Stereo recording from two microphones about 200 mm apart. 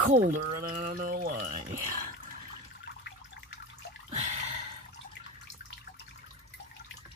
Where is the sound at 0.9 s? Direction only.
45° right (ahead or behind).